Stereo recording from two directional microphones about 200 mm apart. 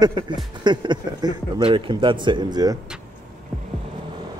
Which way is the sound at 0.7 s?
20° right (ahead or behind).